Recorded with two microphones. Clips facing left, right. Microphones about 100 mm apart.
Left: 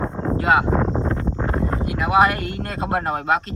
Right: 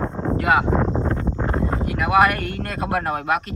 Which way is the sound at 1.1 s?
Centre (ahead or behind).